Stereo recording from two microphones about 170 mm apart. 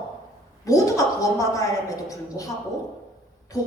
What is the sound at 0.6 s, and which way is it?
A woman's voice, 20° left (ahead or behind).